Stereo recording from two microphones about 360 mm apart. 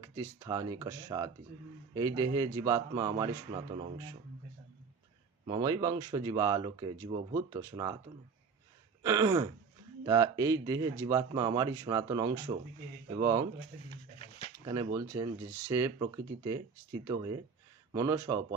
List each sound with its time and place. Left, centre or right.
0.0 s speech: centre
5.5 s speech: centre
9.0 s speech: centre
13.9 s dog: centre
14.6 s speech: centre